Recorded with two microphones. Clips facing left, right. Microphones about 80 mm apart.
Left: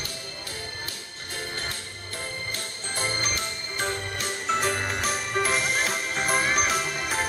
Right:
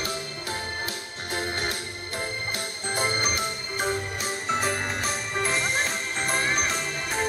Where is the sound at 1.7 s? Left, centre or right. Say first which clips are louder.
Right 4 dB; centre.